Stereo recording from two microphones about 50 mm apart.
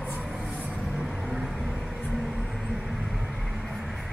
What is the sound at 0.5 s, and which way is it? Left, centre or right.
Vehicle, right.